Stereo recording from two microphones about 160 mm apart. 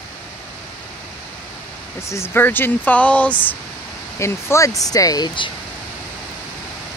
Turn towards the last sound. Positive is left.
turn(degrees=30)  # may be behind; listen again after turning